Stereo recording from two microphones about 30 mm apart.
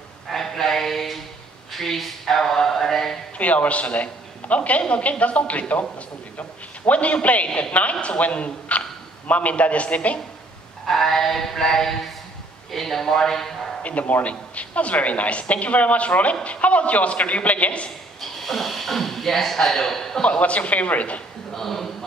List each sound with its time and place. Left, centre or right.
0.3 s a sound: centre
1.7 s speech: centre
3.3 s a man's voice: left
6.9 s a woman's voice: left
7.7 s speech: left
8.3 s a man's voice: left
10.9 s synthetic singing: centre
13.8 s a woman's voice: left
18.4 s speech: centre
20.2 s a woman's voice: left
21.5 s synthetic singing: centre